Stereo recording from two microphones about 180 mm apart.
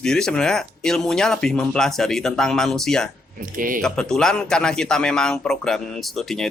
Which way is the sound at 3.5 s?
50° right (ahead or behind).